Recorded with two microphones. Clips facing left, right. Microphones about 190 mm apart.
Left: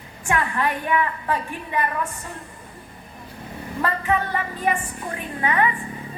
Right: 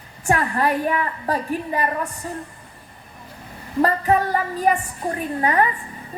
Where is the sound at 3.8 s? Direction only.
40° right (ahead or behind).